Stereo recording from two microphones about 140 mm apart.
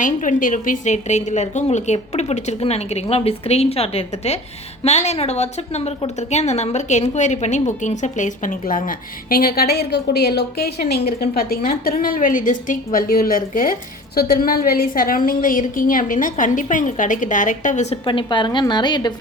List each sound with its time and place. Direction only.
0.0 s a woman's voice: 70° left (ahead or behind); by 9.6 s 90° left
11.0 s a woman's voice: 90° left
14.2 s a woman's voice: 90° left; by 18.0 s 55° left (ahead or behind)
18.0 s a woman's voice: 35° left (ahead or behind)